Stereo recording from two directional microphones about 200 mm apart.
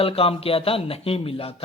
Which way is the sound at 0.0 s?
30° left (ahead or behind).